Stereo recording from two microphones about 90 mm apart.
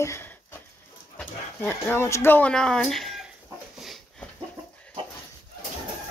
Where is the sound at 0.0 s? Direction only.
30° left (ahead or behind).